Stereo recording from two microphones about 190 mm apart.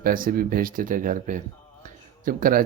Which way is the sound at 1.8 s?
45° right (ahead or behind).